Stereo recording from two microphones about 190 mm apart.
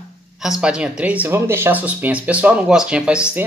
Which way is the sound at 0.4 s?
5° right (ahead or behind).